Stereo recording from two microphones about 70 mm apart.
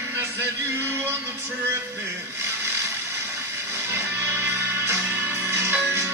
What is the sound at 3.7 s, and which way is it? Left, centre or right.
Music, right.